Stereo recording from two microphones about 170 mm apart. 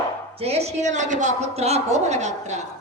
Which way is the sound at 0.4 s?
40° right (ahead or behind).